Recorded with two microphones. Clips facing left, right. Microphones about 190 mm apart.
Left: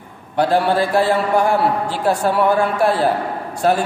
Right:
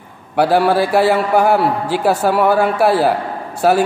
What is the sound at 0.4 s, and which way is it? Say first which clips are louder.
A man's voice: right 3 dB; 5° right (ahead or behind).